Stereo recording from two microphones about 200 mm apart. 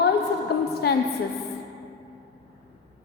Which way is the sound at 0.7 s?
55° left (ahead or behind).